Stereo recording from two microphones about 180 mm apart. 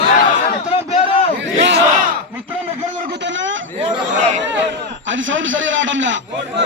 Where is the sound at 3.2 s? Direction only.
90° right.